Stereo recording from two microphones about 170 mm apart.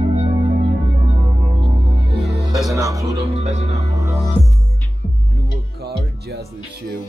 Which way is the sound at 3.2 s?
40° right (ahead or behind).